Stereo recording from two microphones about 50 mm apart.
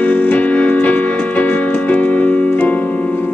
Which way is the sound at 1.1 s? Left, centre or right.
Left.